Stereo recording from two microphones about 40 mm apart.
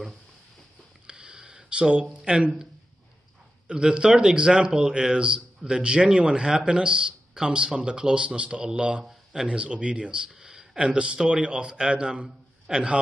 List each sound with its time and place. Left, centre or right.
1.0 s a sound: right
2.1 s speech: right
3.6 s speech: right
9.0 s a man's voice: centre
9.5 s speech: right